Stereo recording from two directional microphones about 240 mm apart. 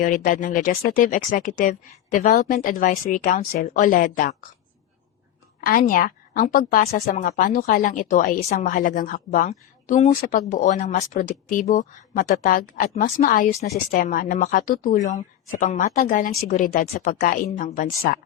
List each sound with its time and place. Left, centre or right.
0.0 s a woman's voice: left
5.5 s a woman's voice: left